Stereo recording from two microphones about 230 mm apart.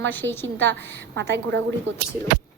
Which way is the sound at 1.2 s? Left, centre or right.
Right.